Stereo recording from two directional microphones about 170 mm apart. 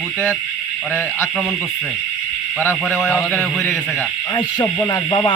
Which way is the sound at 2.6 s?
10° left (ahead or behind).